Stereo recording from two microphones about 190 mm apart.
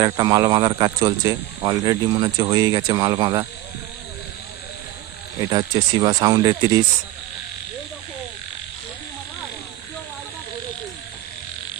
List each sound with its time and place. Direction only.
0.0 s speech: 20° right (ahead or behind)
5.4 s speech: 25° right (ahead or behind)